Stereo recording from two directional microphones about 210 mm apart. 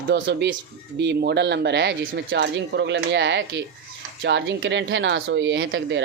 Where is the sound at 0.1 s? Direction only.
55° right (ahead or behind).